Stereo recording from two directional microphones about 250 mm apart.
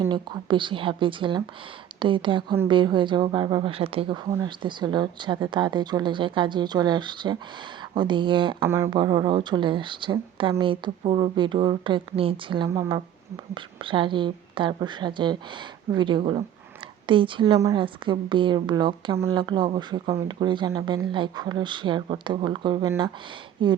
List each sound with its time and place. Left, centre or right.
0.0 s a woman's voice: centre